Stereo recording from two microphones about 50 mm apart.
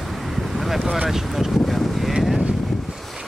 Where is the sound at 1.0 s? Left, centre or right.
Centre.